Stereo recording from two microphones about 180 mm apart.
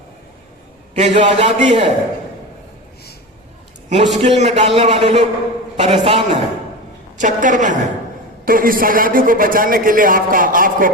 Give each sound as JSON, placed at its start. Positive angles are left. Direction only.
{"t": 0.9, "sound": "a man's voice", "side_deg": -40}
{"t": 3.8, "sound": "a man's voice", "side_deg": -40}
{"t": 7.2, "sound": "a man's voice", "side_deg": -45}